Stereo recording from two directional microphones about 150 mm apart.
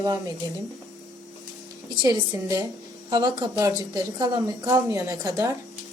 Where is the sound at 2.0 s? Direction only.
25° right (ahead or behind).